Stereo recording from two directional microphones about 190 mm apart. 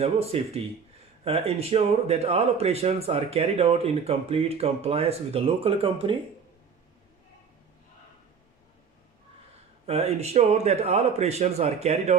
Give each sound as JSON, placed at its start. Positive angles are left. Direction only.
{"t": 0.0, "sound": "speech", "side_deg": -30}
{"t": 9.8, "sound": "speech", "side_deg": -35}